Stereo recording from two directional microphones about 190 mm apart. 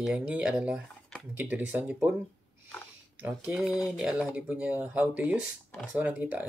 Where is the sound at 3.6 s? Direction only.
15° left (ahead or behind).